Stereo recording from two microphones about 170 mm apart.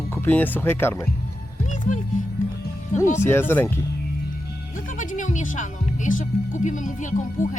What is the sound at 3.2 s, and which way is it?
Speech, 15° left (ahead or behind).